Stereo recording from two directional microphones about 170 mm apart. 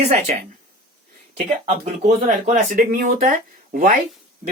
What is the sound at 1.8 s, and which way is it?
Speech, 45° right (ahead or behind).